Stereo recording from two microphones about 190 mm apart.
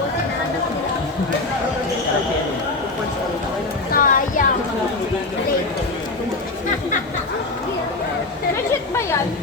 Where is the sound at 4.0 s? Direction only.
45° left (ahead or behind).